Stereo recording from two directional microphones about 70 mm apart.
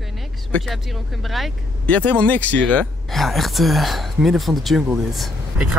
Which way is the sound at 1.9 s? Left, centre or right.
Centre.